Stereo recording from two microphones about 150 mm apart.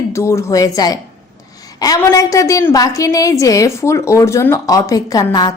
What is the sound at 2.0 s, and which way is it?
A woman's voice, 20° left (ahead or behind).